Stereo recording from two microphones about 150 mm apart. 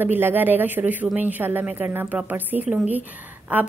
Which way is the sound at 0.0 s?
15° right (ahead or behind).